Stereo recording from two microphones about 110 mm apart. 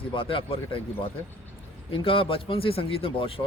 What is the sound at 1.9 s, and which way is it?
A man's voice, 55° left (ahead or behind).